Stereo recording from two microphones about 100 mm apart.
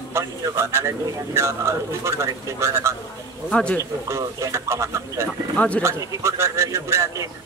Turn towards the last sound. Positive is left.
turn(degrees=-30)  # may be behind; listen again after turning